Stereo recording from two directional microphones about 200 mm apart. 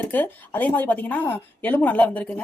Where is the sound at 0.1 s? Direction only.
10° left (ahead or behind).